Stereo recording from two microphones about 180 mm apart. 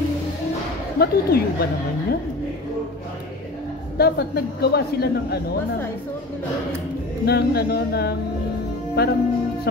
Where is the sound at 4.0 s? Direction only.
60° left (ahead or behind).